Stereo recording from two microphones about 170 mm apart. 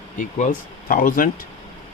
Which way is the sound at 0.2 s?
50° left (ahead or behind).